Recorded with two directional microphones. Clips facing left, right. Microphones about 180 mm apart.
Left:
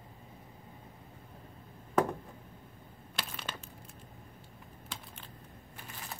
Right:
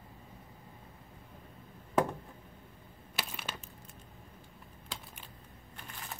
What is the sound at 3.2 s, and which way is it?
Crushing, 10° right (ahead or behind).